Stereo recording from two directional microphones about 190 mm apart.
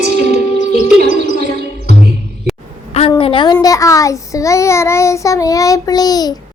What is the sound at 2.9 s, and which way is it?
A child's voice, 30° left (ahead or behind).